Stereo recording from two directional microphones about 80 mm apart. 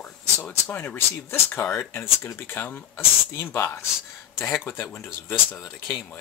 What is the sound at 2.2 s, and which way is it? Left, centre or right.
Speech, left.